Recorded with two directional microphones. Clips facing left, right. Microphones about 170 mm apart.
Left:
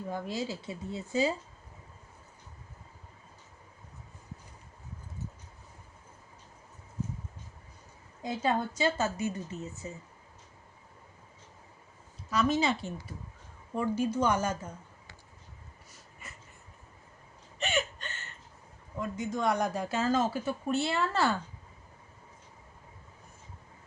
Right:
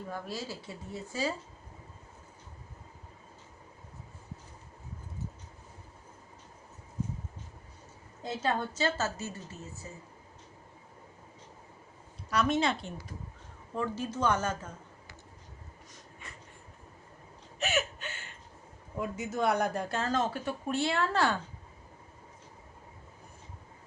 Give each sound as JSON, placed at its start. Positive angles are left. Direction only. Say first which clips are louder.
{"t": 0.1, "sound": "speech", "louder": "left 5 dB", "side_deg": 20}
{"t": 8.2, "sound": "a woman's voice", "louder": "left 2 dB", "side_deg": 10}
{"t": 12.3, "sound": "a woman's voice", "louder": "left 1 dB", "side_deg": 0}
{"t": 17.6, "sound": "a sound", "louder": "even", "side_deg": -5}
{"t": 18.9, "sound": "speech", "louder": "right 1 dB", "side_deg": -10}